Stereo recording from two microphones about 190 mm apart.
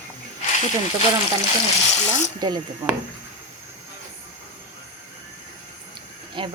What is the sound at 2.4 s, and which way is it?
Speech, 20° right (ahead or behind).